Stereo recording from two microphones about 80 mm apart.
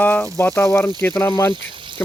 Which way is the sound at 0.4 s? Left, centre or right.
Left.